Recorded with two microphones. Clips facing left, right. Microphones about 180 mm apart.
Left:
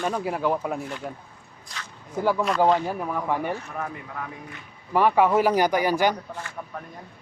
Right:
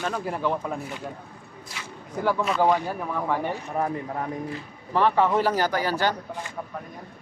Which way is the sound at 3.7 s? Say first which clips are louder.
Right 6 dB; 35° right (ahead or behind).